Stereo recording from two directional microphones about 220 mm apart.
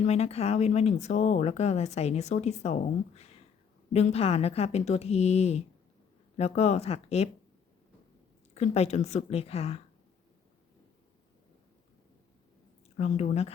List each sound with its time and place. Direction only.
0.0 s speech: 30° left (ahead or behind)
8.5 s speech: 30° left (ahead or behind)
13.0 s speech: 30° left (ahead or behind)